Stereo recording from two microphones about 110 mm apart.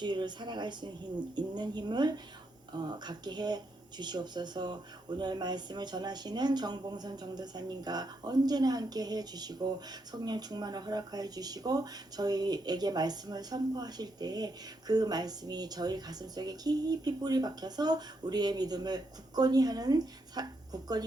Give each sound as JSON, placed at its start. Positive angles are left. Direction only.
{"t": 0.0, "sound": "a woman's voice", "side_deg": -45}